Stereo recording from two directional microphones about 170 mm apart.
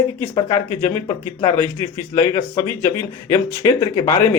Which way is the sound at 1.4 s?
15° left (ahead or behind).